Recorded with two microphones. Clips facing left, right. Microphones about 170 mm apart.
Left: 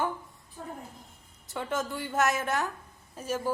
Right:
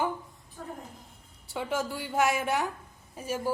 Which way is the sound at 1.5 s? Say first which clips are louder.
Right 1 dB; 10° right (ahead or behind).